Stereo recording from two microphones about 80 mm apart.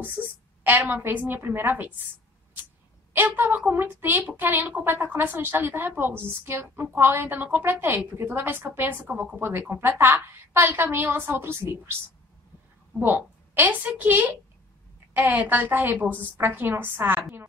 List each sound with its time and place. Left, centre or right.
0.7 s speech: right
3.1 s a woman's voice: right
13.0 s speech: right